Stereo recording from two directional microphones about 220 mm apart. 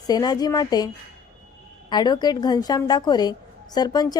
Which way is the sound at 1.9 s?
20° left (ahead or behind).